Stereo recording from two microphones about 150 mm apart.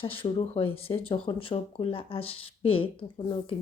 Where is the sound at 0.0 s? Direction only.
35° left (ahead or behind).